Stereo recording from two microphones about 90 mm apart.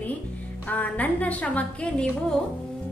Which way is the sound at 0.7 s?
15° left (ahead or behind).